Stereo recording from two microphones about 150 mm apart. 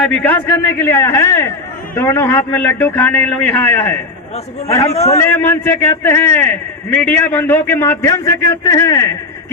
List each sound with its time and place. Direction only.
0.0 s a man's voice: 10° left (ahead or behind)
5.0 s a man's voice: 15° left (ahead or behind)